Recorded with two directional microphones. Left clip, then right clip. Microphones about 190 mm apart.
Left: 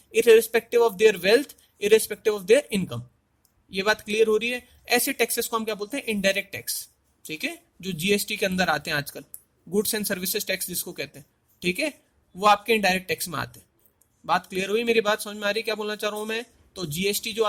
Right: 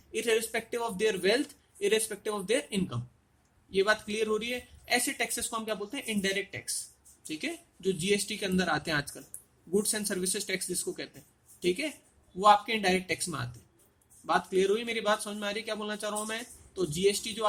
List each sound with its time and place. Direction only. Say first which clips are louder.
0.1 s speech: left 12 dB; 55° left (ahead or behind)